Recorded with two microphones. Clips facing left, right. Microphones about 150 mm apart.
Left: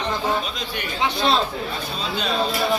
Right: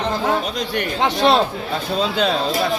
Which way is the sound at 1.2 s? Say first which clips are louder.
Right 5 dB; 60° right (ahead or behind).